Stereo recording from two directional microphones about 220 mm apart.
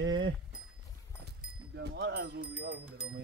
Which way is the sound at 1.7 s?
50° right (ahead or behind).